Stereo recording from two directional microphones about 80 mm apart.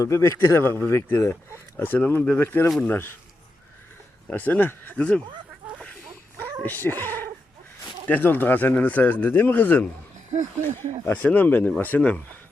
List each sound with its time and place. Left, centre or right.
0.0 s speech: left
1.8 s speech: left
4.3 s speech: left
5.8 s fowl: centre
8.0 s speech: left